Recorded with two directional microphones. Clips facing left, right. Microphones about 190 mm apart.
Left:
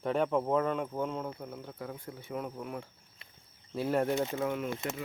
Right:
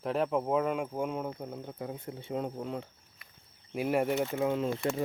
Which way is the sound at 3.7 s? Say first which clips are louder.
Right 1 dB; 15° right (ahead or behind).